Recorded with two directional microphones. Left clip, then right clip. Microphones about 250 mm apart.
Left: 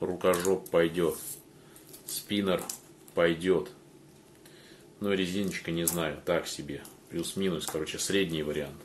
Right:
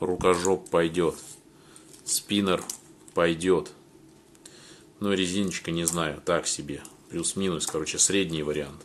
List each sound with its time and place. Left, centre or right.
0.0 s speech: right
2.2 s speech: right
5.0 s speech: right